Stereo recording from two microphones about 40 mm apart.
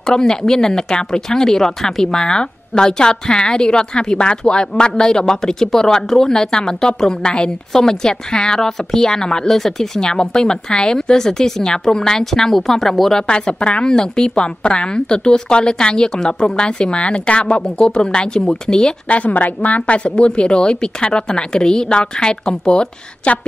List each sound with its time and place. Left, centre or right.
0.0 s speech: centre
13.3 s a woman's voice: left
19.0 s a woman's voice: left